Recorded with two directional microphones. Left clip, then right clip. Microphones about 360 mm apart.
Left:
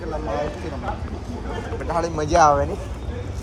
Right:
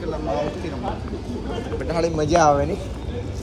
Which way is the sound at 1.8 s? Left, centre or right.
Centre.